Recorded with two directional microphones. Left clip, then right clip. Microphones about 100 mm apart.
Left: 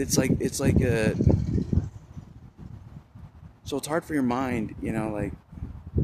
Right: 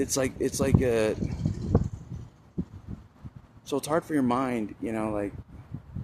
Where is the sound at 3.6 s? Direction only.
15° left (ahead or behind).